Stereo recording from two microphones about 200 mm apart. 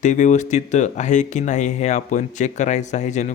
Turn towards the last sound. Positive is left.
turn(degrees=35)  # may be behind; listen again after turning